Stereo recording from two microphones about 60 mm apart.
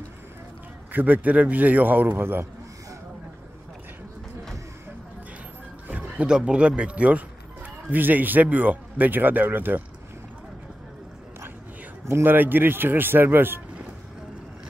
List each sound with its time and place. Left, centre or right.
0.9 s a man's voice: right
5.9 s a sound: right
6.3 s a man's voice: centre; by 9.8 s right
12.1 s speech: right